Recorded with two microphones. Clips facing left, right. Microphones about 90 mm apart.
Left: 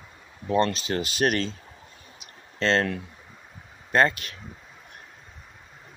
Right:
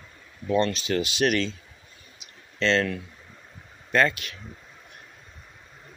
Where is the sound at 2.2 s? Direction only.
40° left (ahead or behind).